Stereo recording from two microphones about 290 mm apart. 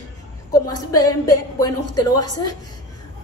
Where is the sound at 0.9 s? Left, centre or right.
Left.